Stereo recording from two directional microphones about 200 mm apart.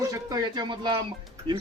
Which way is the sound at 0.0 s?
20° right (ahead or behind).